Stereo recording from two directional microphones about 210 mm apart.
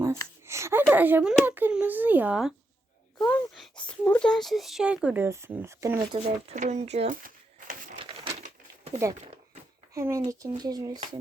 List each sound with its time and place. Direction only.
0.0 s a child's voice: 15° right (ahead or behind)
6.1 s speech: 30° right (ahead or behind)
7.9 s a sound: 25° right (ahead or behind)
9.9 s a child's voice: 15° right (ahead or behind)